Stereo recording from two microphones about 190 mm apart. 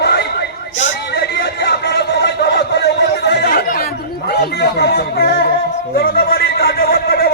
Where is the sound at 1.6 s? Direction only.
60° left (ahead or behind).